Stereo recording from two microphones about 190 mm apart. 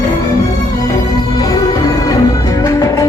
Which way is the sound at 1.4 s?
20° left (ahead or behind).